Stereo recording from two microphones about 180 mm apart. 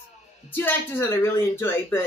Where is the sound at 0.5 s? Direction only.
10° left (ahead or behind).